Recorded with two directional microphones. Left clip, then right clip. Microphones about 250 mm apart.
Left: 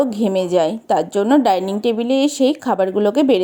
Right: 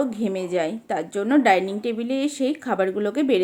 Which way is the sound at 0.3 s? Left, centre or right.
Left.